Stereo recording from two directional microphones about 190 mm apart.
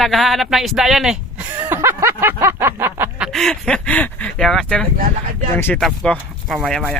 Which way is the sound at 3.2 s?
Centre (ahead or behind).